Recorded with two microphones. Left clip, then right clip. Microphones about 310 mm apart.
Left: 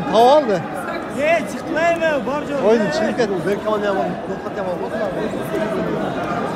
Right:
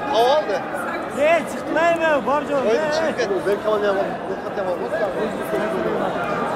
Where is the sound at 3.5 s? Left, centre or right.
Centre.